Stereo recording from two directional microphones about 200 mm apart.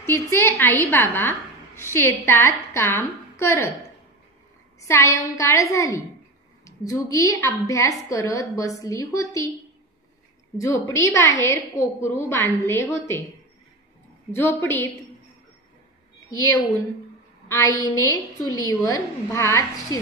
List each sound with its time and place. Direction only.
0.0 s a woman's voice: 10° left (ahead or behind)
4.7 s a woman's voice: 15° left (ahead or behind)
10.6 s a woman's voice: 15° left (ahead or behind)
14.3 s a woman's voice: 10° left (ahead or behind)
16.3 s a woman's voice: 15° left (ahead or behind)